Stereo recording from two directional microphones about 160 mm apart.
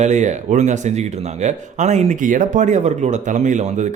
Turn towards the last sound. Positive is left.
turn(degrees=-50)  # may be behind; listen again after turning